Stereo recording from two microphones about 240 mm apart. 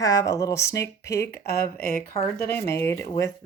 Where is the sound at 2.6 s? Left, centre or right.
Centre.